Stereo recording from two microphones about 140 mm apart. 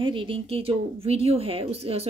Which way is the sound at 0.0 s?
35° right (ahead or behind).